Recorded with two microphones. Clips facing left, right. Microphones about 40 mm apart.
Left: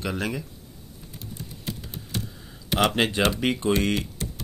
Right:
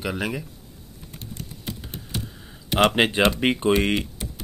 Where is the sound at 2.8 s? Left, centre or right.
Right.